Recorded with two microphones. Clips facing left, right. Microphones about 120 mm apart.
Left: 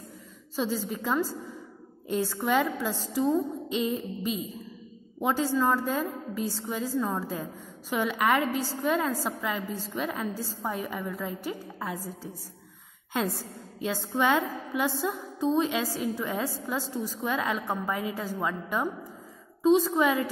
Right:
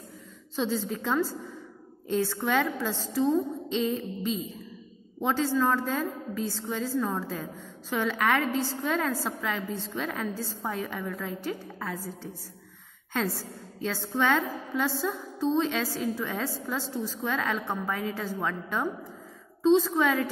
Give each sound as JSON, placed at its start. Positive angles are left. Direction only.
{"t": 0.6, "sound": "a woman's voice", "side_deg": 5}
{"t": 12.0, "sound": "a woman's voice", "side_deg": 40}
{"t": 13.1, "sound": "a woman's voice", "side_deg": 15}